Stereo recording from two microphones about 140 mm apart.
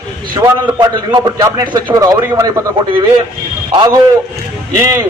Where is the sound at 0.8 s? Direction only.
25° right (ahead or behind).